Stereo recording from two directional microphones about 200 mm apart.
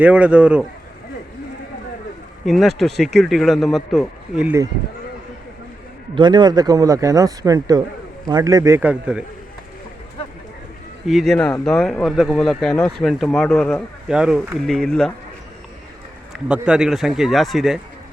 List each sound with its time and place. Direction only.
0.0 s speech: 5° right (ahead or behind)
2.5 s speech: centre (ahead or behind)
6.1 s speech: 20° right (ahead or behind); by 9.2 s 5° right (ahead or behind)
11.0 s speech: centre (ahead or behind)
16.3 s speech: 5° right (ahead or behind)